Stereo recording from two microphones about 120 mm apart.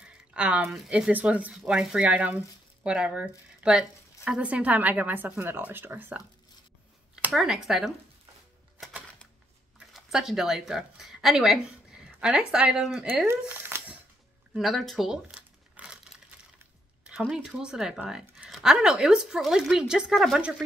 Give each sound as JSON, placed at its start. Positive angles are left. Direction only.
{"t": 0.0, "sound": "speech", "side_deg": -10}
{"t": 7.3, "sound": "speech", "side_deg": -5}
{"t": 9.8, "sound": "speech", "side_deg": -5}
{"t": 13.3, "sound": "a sound", "side_deg": -20}
{"t": 14.5, "sound": "crumpling", "side_deg": 0}
{"t": 17.0, "sound": "speech", "side_deg": -5}